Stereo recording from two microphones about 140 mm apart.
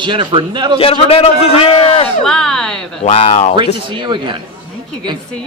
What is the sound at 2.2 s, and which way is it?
Speech, 5° left (ahead or behind).